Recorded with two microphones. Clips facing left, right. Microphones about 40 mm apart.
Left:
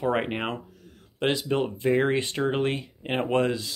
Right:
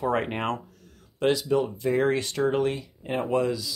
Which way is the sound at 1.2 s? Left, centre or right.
Left.